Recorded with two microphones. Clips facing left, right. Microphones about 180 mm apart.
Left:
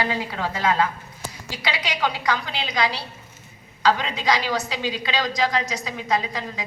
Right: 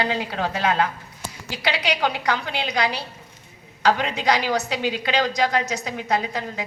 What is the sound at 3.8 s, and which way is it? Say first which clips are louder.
A woman's voice: right 1 dB; 65° right (ahead or behind).